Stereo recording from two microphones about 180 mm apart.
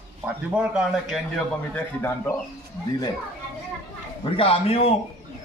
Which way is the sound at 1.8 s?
10° left (ahead or behind).